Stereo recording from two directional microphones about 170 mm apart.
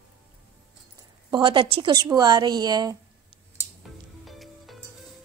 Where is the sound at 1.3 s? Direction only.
30° right (ahead or behind).